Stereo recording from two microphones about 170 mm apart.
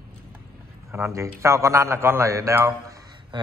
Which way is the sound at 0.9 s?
15° right (ahead or behind).